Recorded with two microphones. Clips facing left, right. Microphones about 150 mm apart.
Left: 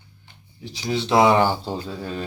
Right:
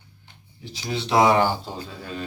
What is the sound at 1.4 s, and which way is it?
Mantra, 30° left (ahead or behind).